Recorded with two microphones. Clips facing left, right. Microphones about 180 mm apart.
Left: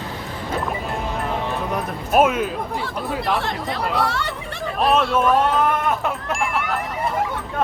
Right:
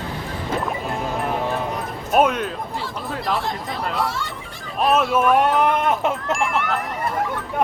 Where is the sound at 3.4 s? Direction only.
70° left (ahead or behind).